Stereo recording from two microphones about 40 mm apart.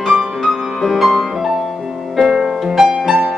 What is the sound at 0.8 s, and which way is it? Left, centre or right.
Music, centre.